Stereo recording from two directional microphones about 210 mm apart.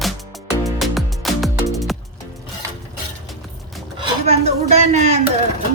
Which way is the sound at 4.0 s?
30° right (ahead or behind).